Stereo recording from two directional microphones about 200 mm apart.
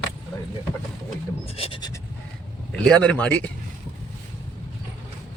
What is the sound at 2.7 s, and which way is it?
Speech, 5° left (ahead or behind).